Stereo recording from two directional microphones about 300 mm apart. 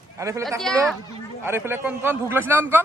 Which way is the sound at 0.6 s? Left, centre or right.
Centre.